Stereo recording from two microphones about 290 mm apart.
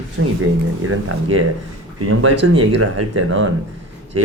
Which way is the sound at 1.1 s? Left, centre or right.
Right.